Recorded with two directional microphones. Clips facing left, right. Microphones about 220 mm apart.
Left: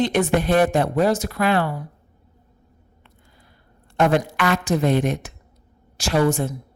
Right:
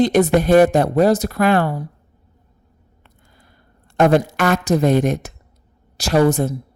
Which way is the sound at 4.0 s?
40° right (ahead or behind).